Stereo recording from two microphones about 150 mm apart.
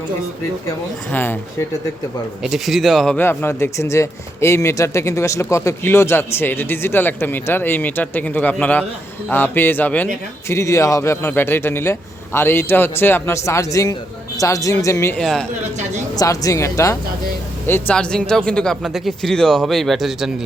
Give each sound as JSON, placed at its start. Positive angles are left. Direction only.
{"t": 1.1, "sound": "speech", "side_deg": 15}
{"t": 2.4, "sound": "speech", "side_deg": 0}
{"t": 3.2, "sound": "speech", "side_deg": 15}
{"t": 15.2, "sound": "speech", "side_deg": 0}
{"t": 16.1, "sound": "speech", "side_deg": 20}